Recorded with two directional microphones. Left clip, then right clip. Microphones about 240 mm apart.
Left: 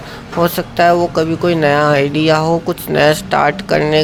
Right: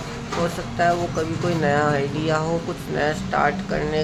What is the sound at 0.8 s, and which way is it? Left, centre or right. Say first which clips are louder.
Speech: left 9 dB; left.